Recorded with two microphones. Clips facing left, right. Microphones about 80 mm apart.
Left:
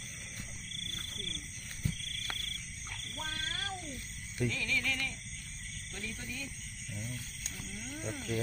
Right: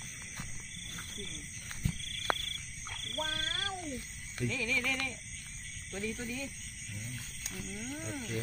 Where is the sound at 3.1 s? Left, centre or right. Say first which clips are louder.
Right 3 dB; right.